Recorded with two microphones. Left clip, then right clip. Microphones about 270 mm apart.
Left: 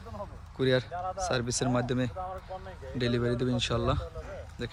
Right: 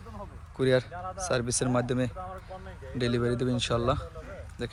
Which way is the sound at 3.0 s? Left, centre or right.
Centre.